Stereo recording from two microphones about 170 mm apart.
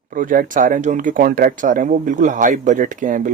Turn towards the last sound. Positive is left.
turn(degrees=-50)  # may be behind; listen again after turning